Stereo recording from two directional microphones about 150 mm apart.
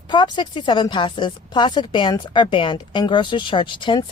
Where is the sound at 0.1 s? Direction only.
30° left (ahead or behind).